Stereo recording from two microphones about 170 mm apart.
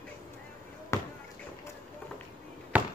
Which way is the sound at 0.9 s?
20° left (ahead or behind).